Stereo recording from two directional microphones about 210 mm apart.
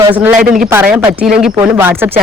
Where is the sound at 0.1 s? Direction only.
5° right (ahead or behind).